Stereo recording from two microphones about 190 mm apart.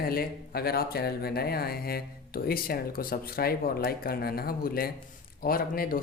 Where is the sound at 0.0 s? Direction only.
55° left (ahead or behind).